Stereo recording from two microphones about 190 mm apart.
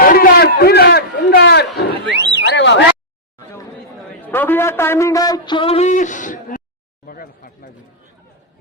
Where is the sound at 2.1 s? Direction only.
65° right (ahead or behind).